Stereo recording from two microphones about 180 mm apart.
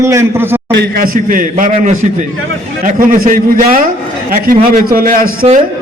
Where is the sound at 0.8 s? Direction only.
55° right (ahead or behind).